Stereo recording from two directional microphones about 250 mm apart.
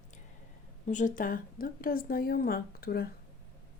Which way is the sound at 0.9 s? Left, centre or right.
Left.